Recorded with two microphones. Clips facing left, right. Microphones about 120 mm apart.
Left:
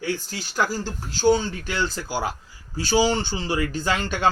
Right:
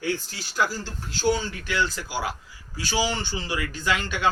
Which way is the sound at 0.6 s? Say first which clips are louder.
Left 2 dB; 45° left (ahead or behind).